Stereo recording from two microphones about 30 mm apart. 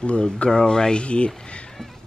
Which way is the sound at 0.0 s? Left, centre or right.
Left.